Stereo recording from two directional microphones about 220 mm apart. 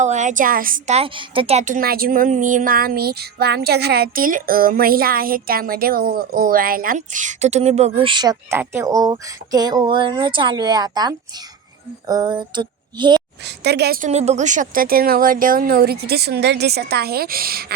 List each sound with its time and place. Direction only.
0.0 s a woman's voice: 35° right (ahead or behind)
12.0 s a sound: 20° right (ahead or behind)
13.4 s a woman's voice: 50° right (ahead or behind)
14.1 s a woman's voice: 30° right (ahead or behind)